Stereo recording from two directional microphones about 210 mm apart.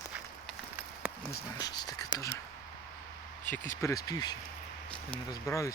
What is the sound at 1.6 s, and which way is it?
Speech, 20° left (ahead or behind).